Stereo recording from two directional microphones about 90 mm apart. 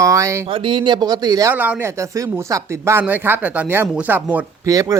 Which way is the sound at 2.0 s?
35° right (ahead or behind).